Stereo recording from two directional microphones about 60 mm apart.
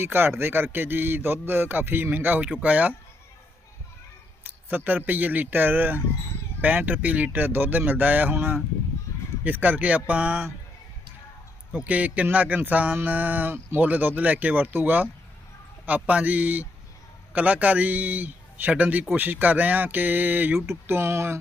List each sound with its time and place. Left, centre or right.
0.0 s a man's voice: right
4.4 s a man's voice: right
11.7 s a man's voice: right
16.0 s a man's voice: right
20.6 s speech: right